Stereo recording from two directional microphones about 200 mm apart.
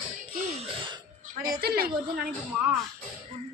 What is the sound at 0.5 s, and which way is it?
Music, 25° right (ahead or behind).